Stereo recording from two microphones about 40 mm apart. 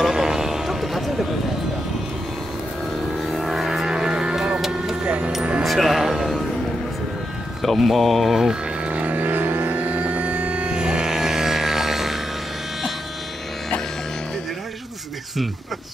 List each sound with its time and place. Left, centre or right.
0.0 s a sound: centre
3.3 s music: centre
3.9 s music: centre
4.6 s a sound: centre
5.0 s music: right
5.6 s music: centre
7.6 s speech: centre
8.8 s music: right; by 12.2 s centre